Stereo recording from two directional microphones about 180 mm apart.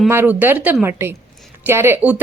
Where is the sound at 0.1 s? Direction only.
10° right (ahead or behind).